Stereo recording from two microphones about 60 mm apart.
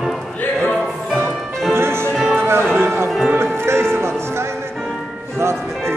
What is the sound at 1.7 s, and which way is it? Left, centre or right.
Music, right.